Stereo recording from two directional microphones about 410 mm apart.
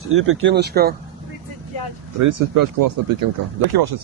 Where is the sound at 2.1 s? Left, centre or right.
Right.